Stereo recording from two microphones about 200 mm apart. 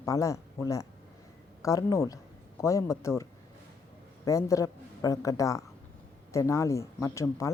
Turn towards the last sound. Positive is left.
turn(degrees=15)  # may be behind; listen again after turning